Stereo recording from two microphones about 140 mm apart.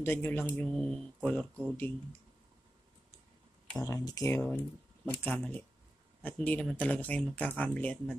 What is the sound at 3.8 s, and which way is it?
Speech, 25° left (ahead or behind).